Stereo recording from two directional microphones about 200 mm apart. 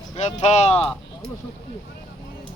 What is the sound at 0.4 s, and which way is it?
Speech, 35° left (ahead or behind).